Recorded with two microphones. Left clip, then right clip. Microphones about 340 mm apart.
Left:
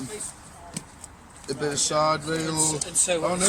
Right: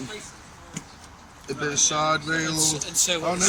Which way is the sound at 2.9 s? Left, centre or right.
Left.